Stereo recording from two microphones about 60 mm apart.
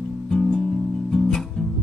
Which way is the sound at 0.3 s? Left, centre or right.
Centre.